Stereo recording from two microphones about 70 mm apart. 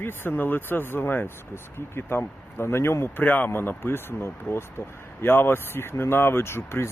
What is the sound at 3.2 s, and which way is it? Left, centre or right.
Speech, left.